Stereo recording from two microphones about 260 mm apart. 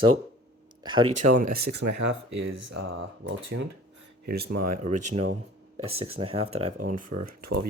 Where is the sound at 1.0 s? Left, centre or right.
Right.